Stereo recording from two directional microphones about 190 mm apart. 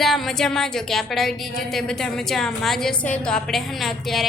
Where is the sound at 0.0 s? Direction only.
Centre (ahead or behind).